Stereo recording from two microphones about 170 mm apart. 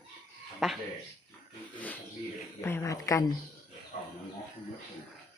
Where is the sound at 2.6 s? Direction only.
15° left (ahead or behind).